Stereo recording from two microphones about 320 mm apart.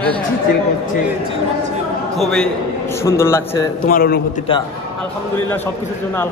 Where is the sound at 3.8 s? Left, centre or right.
Left.